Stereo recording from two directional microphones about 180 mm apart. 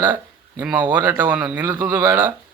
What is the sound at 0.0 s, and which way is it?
A man's voice, 10° right (ahead or behind).